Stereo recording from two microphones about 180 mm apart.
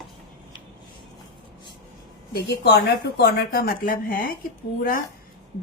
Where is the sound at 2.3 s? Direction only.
65° left (ahead or behind).